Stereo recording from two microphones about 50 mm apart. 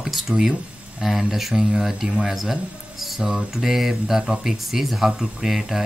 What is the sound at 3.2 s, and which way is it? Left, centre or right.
Speech, centre.